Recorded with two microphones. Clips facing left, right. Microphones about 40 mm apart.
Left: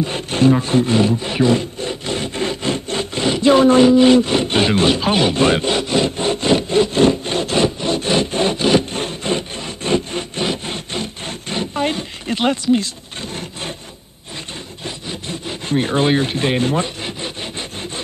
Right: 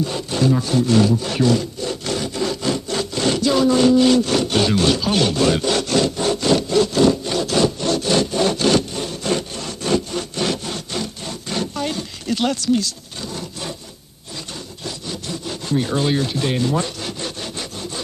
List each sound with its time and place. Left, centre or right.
0.0 s wood: left
3.8 s a sound: left
8.9 s wood: left
14.9 s wood: left